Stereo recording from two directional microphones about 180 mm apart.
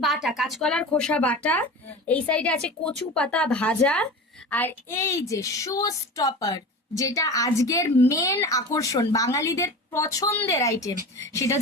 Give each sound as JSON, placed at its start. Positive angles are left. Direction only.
{"t": 0.0, "sound": "speech", "side_deg": 0}